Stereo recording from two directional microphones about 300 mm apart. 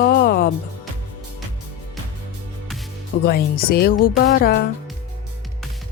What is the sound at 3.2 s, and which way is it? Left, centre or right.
Speech, left.